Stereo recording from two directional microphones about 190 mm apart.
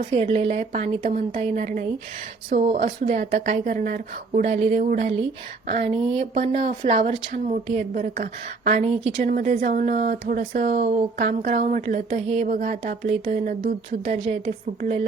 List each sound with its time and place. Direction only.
0.1 s speech: 35° right (ahead or behind)